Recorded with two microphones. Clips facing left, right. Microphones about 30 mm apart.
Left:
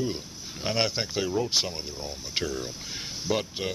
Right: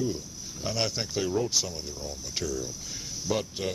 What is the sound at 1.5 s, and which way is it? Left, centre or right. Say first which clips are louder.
Speech: left 3 dB; left.